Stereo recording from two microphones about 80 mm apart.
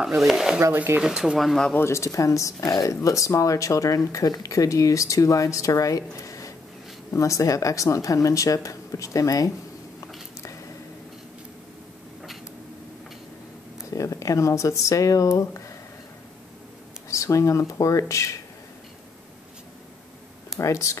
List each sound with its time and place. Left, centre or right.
0.2 s speech: centre
1.8 s speech: left
13.8 s speech: left
17.1 s speech: left
20.5 s speech: left